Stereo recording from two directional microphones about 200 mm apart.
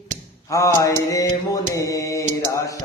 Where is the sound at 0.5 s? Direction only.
15° left (ahead or behind).